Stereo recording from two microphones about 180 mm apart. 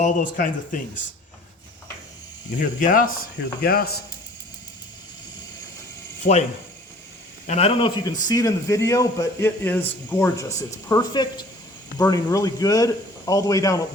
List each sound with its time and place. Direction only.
0.0 s speech: 45° left (ahead or behind)
2.6 s speech: 50° left (ahead or behind)
6.3 s speech: 50° left (ahead or behind)
7.4 s a man's voice: 35° left (ahead or behind); by 13.8 s 20° left (ahead or behind)